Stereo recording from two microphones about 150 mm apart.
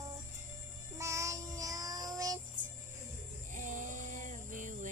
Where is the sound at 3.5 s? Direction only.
60° right (ahead or behind).